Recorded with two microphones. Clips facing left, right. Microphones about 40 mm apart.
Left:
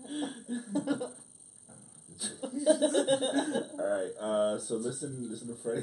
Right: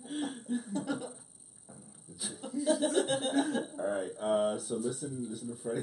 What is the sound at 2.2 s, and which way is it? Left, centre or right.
Speech, centre.